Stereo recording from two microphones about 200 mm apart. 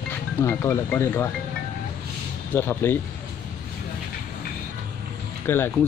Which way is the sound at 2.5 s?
10° left (ahead or behind).